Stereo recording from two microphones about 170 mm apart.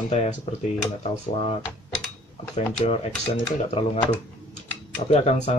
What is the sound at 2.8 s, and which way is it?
Speech, 35° left (ahead or behind).